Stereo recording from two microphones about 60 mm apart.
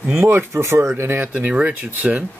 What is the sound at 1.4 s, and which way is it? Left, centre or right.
Speech, right.